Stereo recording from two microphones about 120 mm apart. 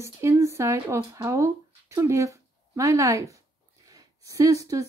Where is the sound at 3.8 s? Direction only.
30° right (ahead or behind).